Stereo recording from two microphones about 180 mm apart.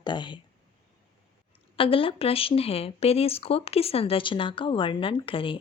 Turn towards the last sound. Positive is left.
turn(degrees=30)  # may be behind; listen again after turning